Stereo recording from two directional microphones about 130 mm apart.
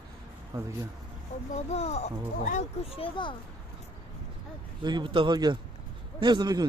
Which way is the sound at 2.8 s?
45° left (ahead or behind).